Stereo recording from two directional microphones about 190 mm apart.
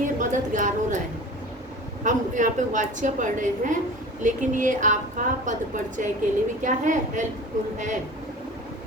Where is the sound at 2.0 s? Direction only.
40° right (ahead or behind).